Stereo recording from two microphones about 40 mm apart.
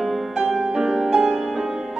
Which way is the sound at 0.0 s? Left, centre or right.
Centre.